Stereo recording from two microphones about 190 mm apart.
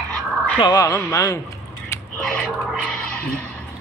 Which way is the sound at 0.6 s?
20° left (ahead or behind).